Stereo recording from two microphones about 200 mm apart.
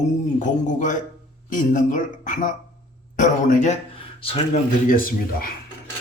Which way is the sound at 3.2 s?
40° left (ahead or behind).